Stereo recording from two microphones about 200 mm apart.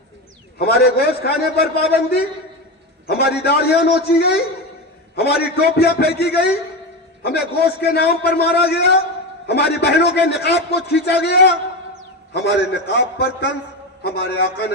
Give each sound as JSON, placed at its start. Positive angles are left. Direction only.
{"t": 0.6, "sound": "a man's voice", "side_deg": 55}